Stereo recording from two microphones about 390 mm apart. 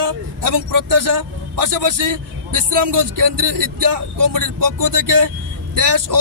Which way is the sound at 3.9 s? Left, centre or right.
Right.